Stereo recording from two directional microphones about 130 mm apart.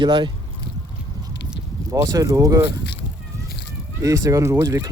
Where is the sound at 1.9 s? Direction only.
25° right (ahead or behind).